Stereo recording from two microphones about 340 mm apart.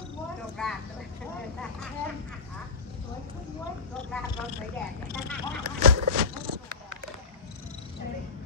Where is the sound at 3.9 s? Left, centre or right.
Centre.